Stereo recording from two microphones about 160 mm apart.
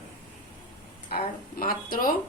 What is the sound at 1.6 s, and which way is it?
Speech, 60° left (ahead or behind).